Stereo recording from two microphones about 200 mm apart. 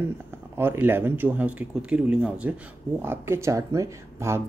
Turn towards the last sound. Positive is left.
turn(degrees=-15)  # may be behind; listen again after turning